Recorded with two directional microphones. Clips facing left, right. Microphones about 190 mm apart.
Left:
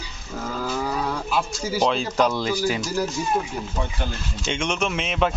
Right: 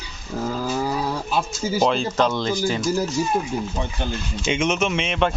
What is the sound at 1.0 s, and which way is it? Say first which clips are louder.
Speech: right 1 dB; 25° right (ahead or behind).